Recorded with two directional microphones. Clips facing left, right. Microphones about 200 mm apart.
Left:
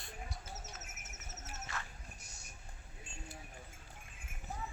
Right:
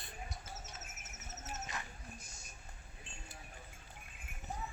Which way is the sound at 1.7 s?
15° right (ahead or behind).